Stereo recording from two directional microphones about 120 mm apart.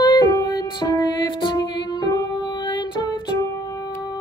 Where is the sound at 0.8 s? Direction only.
35° left (ahead or behind).